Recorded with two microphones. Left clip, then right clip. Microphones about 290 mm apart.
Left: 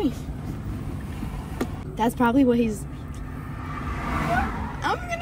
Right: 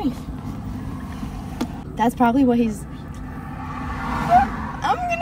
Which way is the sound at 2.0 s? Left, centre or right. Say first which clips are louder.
Right 3 dB; centre.